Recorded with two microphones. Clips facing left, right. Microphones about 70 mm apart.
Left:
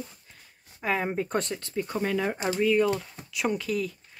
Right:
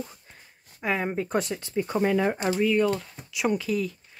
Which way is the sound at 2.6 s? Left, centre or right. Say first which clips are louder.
Left 1 dB; centre.